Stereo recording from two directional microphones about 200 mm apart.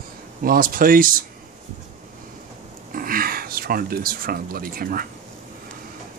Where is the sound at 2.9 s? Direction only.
45° right (ahead or behind).